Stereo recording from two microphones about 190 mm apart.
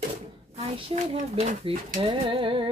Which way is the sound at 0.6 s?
35° right (ahead or behind).